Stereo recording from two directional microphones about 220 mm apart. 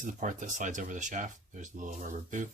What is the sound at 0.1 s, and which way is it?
Speech, 35° right (ahead or behind).